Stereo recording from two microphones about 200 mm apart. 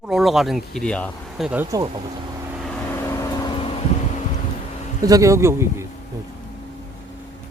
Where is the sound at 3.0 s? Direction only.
20° left (ahead or behind).